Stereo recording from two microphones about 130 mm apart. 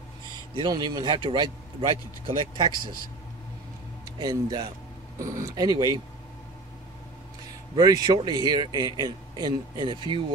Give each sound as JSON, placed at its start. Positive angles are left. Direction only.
{"t": 0.6, "sound": "a man's voice", "side_deg": -35}
{"t": 4.0, "sound": "a man's voice", "side_deg": -30}
{"t": 7.7, "sound": "a man's voice", "side_deg": -30}